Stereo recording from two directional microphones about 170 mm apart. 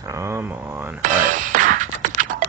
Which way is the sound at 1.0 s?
50° right (ahead or behind).